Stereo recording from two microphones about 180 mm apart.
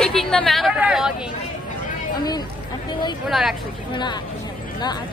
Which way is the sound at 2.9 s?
25° left (ahead or behind).